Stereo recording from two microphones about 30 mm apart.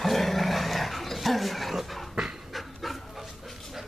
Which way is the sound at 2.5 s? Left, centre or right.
Centre.